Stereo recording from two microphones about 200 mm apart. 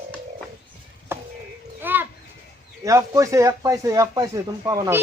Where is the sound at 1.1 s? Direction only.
10° right (ahead or behind).